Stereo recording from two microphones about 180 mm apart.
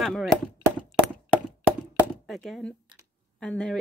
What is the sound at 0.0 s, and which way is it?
Speech, centre (ahead or behind).